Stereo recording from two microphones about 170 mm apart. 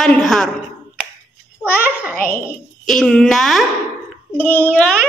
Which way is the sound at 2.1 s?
55° left (ahead or behind).